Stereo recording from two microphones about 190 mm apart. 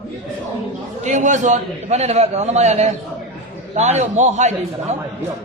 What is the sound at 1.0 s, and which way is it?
A man's voice, 40° right (ahead or behind).